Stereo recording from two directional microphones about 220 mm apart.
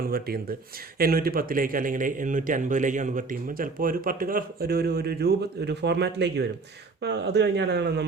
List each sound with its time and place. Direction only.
0.1 s a man's voice: 45° right (ahead or behind)